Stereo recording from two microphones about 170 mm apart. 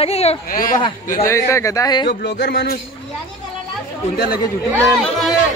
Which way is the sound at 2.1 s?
80° left.